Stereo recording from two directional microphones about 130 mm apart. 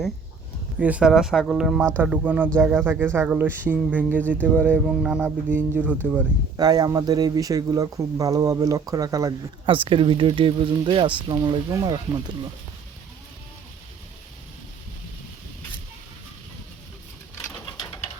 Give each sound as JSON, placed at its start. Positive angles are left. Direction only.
{"t": 0.8, "sound": "speech", "side_deg": -10}
{"t": 2.0, "sound": "speech", "side_deg": -15}
{"t": 6.6, "sound": "speech", "side_deg": -30}
{"t": 9.6, "sound": "speech", "side_deg": -40}